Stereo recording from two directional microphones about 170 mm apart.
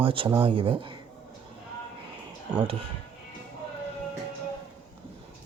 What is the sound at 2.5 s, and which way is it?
Speech, 35° right (ahead or behind).